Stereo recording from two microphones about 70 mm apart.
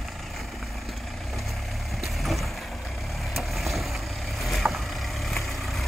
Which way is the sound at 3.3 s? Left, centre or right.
Centre.